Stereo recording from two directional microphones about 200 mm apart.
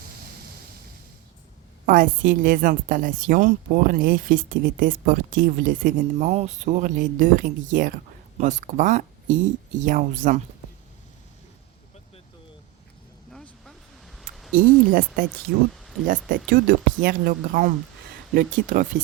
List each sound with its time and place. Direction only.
1.9 s a woman's voice: 40° right (ahead or behind)
13.3 s a sound: centre (ahead or behind)
14.8 s a woman's voice: 45° right (ahead or behind)